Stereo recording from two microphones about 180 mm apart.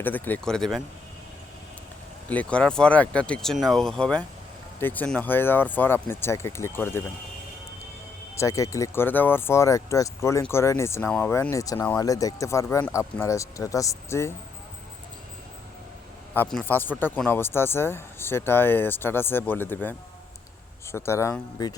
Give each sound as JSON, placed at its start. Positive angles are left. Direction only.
{"t": 0.0, "sound": "speech", "side_deg": 10}
{"t": 2.3, "sound": "speech", "side_deg": 5}
{"t": 8.4, "sound": "speech", "side_deg": 15}
{"t": 16.3, "sound": "speech", "side_deg": 5}